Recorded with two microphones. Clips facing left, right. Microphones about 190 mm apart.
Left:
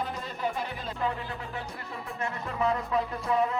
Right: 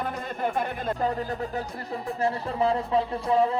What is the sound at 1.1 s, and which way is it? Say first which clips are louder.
Music: right 6 dB; 40° right (ahead or behind).